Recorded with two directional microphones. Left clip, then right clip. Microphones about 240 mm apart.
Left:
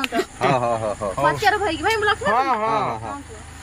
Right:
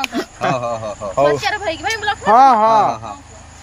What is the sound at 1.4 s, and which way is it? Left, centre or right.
Speech, centre.